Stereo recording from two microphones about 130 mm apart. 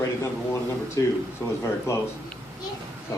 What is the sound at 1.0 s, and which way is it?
A man's voice, 25° left (ahead or behind).